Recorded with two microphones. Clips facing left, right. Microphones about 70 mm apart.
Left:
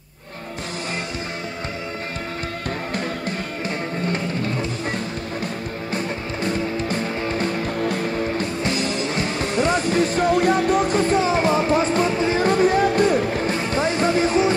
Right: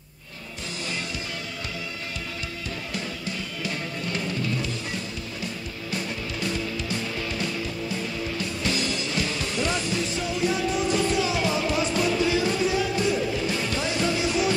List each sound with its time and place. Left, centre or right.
6.4 s music: left